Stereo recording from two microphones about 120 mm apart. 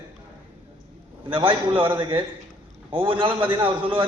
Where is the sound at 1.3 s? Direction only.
45° right (ahead or behind).